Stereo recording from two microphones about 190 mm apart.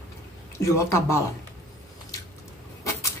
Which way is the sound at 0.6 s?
15° left (ahead or behind).